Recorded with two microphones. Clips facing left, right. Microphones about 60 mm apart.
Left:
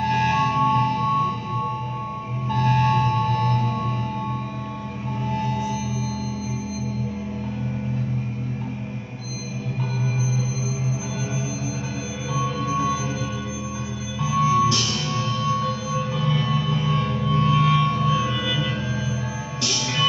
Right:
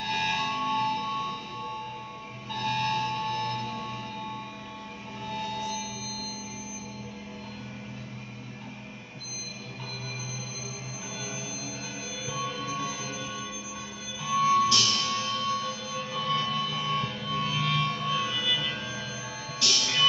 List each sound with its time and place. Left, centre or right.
0.0 s music: centre
5.3 s music: centre
12.4 s music: centre
14.2 s music: centre